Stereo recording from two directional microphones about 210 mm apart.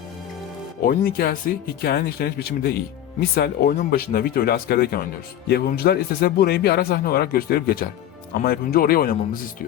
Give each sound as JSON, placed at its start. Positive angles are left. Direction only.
{"t": 0.8, "sound": "a man's voice", "side_deg": 45}